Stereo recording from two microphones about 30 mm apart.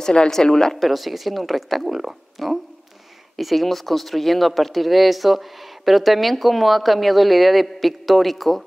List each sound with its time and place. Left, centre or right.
0.3 s a woman's voice: centre
0.7 s speech: centre